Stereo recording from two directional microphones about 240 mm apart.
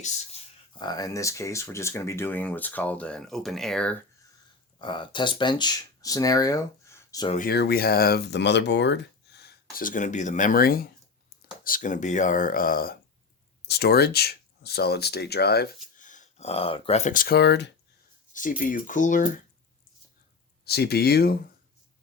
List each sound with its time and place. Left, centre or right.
0.8 s speech: centre
4.8 s speech: centre
7.3 s speech: left
18.3 s speech: left
20.7 s speech: left